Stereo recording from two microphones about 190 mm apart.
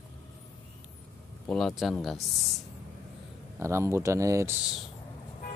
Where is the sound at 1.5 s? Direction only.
Centre (ahead or behind).